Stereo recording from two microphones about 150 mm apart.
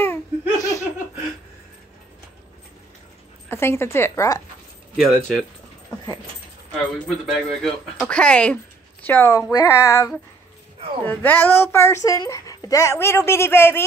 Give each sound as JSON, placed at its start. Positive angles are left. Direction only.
{"t": 0.0, "sound": "laughter", "side_deg": 20}
{"t": 3.4, "sound": "a woman's voice", "side_deg": 15}
{"t": 4.9, "sound": "speech", "side_deg": 0}
{"t": 7.2, "sound": "a woman's voice", "side_deg": 0}